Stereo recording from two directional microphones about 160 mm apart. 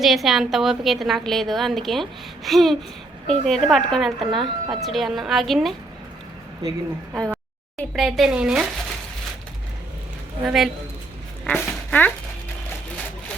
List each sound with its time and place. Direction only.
0.0 s a woman's voice: centre (ahead or behind)
6.6 s speech: 20° right (ahead or behind)
7.8 s a woman's voice: centre (ahead or behind)
10.4 s a woman's voice: centre (ahead or behind)
11.5 s speech: 10° left (ahead or behind)